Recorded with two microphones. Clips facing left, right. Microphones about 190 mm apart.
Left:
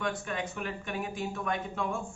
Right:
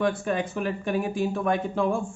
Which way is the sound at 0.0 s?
30° right (ahead or behind).